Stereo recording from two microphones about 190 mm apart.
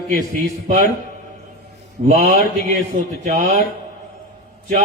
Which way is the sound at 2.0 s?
40° right (ahead or behind).